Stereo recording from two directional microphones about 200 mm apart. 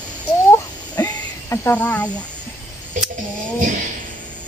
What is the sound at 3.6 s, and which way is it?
Speech, 40° right (ahead or behind).